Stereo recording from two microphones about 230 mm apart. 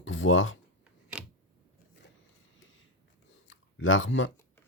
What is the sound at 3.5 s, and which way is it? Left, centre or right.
Chewing, left.